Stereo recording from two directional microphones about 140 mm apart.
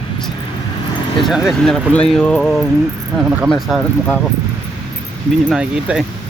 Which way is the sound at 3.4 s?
Centre (ahead or behind).